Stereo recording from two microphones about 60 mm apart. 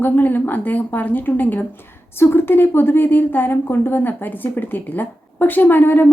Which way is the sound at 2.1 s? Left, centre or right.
Left.